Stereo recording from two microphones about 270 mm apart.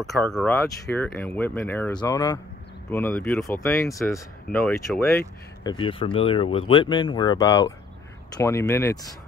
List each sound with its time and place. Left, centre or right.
0.0 s speech: centre
5.6 s speech: centre